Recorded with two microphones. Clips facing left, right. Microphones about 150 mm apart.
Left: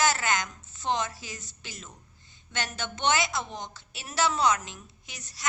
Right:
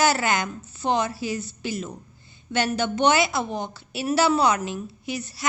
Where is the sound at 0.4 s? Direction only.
65° right (ahead or behind).